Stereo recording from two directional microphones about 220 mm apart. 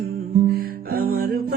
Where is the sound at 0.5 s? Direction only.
45° right (ahead or behind).